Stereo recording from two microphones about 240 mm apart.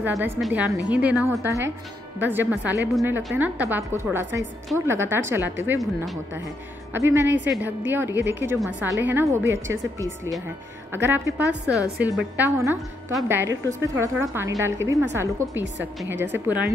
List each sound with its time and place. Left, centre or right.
0.0 s a woman's voice: centre
7.2 s a woman's voice: right
7.6 s speech: centre